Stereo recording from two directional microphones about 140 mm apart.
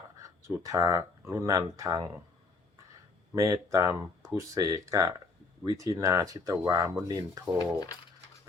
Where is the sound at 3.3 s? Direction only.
20° right (ahead or behind).